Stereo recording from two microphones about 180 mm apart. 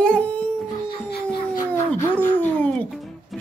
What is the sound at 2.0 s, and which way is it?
Speech, 10° left (ahead or behind).